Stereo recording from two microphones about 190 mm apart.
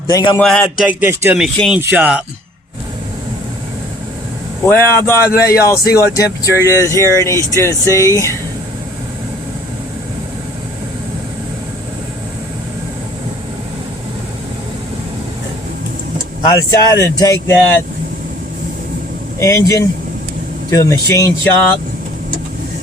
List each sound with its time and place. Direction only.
0.1 s speech: 20° left (ahead or behind)
0.4 s speech: 5° left (ahead or behind)
0.9 s speech: 10° right (ahead or behind)
4.6 s speech: 10° left (ahead or behind)
16.5 s speech: 15° left (ahead or behind)
19.4 s speech: 15° left (ahead or behind)